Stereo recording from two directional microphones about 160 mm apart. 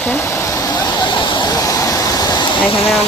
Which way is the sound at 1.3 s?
25° left (ahead or behind).